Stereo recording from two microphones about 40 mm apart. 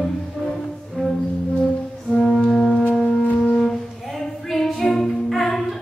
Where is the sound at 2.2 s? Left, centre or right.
Left.